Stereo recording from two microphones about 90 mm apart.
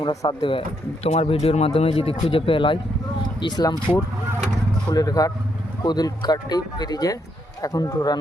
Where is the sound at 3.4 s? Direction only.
55° left (ahead or behind).